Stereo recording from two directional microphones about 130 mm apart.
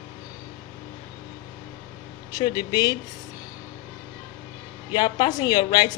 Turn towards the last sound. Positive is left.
turn(degrees=35)  # may be behind; listen again after turning